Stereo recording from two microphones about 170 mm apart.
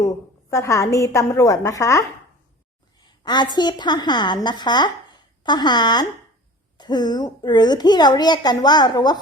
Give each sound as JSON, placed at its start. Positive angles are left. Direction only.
{"t": 0.5, "sound": "a woman's voice", "side_deg": 20}
{"t": 3.2, "sound": "a woman's voice", "side_deg": 25}